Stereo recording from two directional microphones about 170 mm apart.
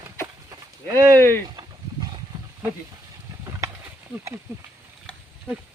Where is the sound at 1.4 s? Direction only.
25° right (ahead or behind).